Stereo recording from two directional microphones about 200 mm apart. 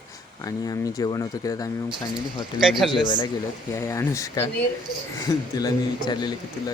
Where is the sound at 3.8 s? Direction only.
15° left (ahead or behind).